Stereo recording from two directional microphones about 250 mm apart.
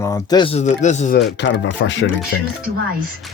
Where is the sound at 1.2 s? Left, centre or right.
Left.